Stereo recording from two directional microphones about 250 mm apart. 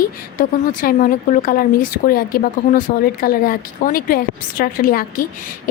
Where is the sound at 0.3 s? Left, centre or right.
Left.